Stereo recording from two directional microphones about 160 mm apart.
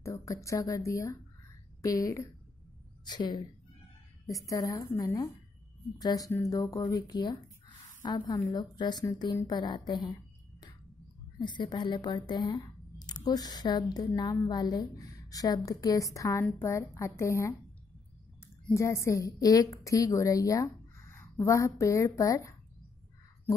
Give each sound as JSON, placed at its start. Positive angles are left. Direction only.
{"t": 0.0, "sound": "speech", "side_deg": 20}
{"t": 11.3, "sound": "speech", "side_deg": 30}
{"t": 18.7, "sound": "speech", "side_deg": 20}